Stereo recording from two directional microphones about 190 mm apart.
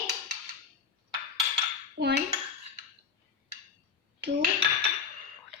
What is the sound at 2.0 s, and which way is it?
Cutlery, 55° right (ahead or behind).